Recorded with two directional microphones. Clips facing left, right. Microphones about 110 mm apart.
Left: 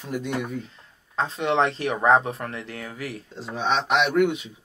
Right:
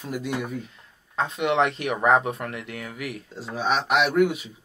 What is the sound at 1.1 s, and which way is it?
Speech, 30° left (ahead or behind).